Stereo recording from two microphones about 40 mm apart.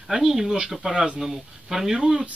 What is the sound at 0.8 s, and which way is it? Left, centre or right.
Speech, right.